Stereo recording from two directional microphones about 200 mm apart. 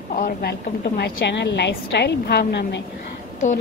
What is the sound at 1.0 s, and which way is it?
A woman's voice, 60° left (ahead or behind).